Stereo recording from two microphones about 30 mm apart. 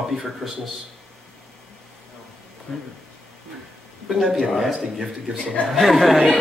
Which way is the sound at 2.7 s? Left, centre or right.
Centre.